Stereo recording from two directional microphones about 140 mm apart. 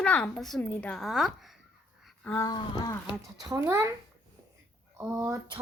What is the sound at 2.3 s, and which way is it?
Speech, 20° left (ahead or behind).